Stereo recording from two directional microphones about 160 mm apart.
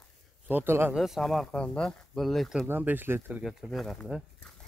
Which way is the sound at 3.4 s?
5° right (ahead or behind).